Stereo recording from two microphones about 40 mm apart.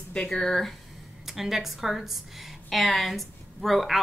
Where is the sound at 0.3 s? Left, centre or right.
Centre.